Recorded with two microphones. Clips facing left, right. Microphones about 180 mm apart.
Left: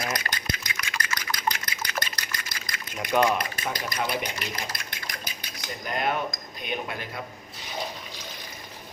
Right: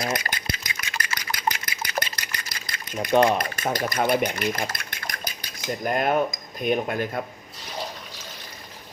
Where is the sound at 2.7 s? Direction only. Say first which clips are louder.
Right 5 dB; 30° right (ahead or behind).